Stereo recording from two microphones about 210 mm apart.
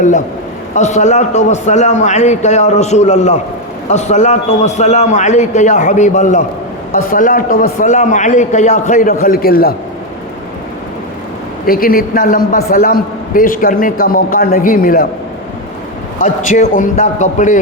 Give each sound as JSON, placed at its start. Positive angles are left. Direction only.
{"t": 0.7, "sound": "a man's voice", "side_deg": 35}
{"t": 11.6, "sound": "a man's voice", "side_deg": 45}
{"t": 16.2, "sound": "a man's voice", "side_deg": 35}